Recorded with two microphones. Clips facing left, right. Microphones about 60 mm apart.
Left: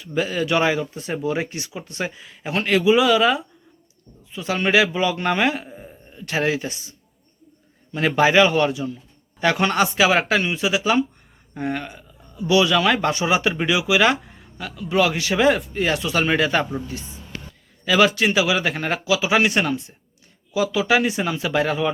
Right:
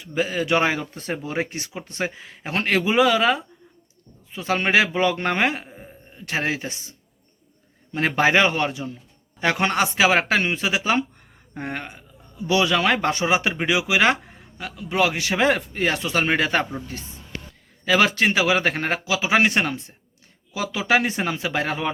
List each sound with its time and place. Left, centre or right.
0.0 s speech: right
0.8 s speech: right
5.6 s a sound: centre
6.1 s speech: right
7.9 s speech: right
17.8 s speech: right